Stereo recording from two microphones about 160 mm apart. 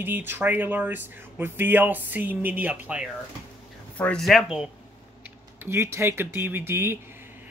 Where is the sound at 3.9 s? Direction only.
5° left (ahead or behind).